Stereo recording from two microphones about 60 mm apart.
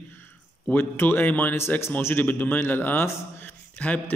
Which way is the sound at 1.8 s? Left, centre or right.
Left.